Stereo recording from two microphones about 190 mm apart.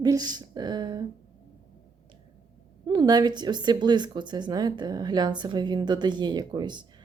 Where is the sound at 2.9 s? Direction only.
20° right (ahead or behind).